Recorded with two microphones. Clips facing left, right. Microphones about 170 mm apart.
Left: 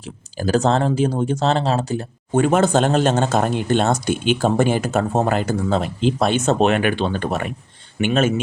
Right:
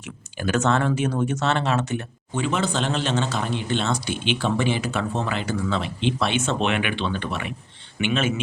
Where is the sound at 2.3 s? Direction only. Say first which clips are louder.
Left 9 dB; 50° left (ahead or behind).